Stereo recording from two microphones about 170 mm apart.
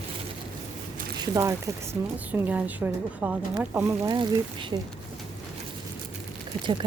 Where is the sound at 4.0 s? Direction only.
25° right (ahead or behind).